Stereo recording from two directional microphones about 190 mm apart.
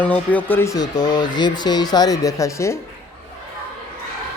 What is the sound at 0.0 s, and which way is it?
Speech, 10° left (ahead or behind).